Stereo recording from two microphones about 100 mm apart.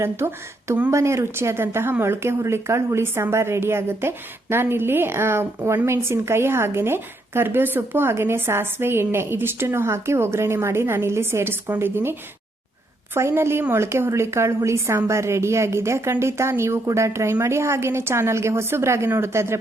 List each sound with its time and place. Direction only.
0.0 s a woman's voice: 25° right (ahead or behind)
13.1 s a woman's voice: 25° right (ahead or behind)